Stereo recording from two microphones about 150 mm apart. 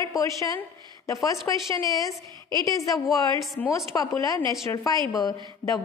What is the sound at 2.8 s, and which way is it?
Speech, centre (ahead or behind).